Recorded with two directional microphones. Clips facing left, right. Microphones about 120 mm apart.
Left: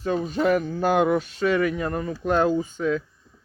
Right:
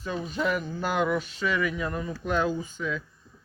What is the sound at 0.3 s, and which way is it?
Speech, 45° left (ahead or behind).